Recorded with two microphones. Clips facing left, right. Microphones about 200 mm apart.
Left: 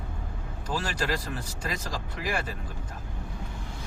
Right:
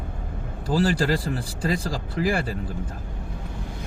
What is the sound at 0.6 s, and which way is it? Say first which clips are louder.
Speech: right 9 dB; 35° right (ahead or behind).